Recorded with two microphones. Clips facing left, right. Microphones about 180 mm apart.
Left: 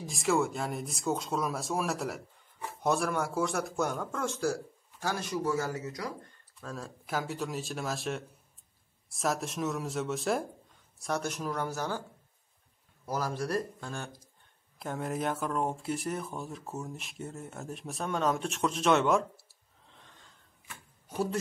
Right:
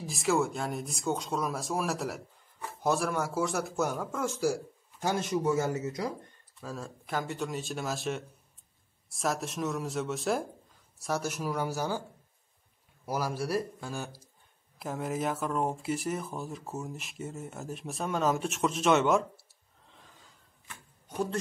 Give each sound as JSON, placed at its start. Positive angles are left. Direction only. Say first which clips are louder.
{"t": 0.0, "sound": "speech", "louder": "even", "side_deg": 0}
{"t": 5.0, "sound": "speech", "louder": "right 3 dB", "side_deg": -20}
{"t": 6.6, "sound": "speech", "louder": "right 1 dB", "side_deg": 0}
{"t": 13.0, "sound": "speech", "louder": "right 1 dB", "side_deg": -10}
{"t": 19.9, "sound": "gasp", "louder": "right 1 dB", "side_deg": 0}
{"t": 20.6, "sound": "a sound", "louder": "even", "side_deg": 5}